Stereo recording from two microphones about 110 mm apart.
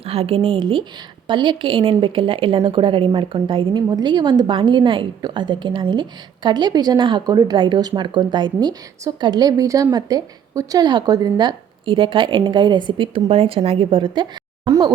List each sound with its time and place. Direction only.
0.0 s a woman's voice: 60° right (ahead or behind)
3.8 s a woman's voice: 40° right (ahead or behind)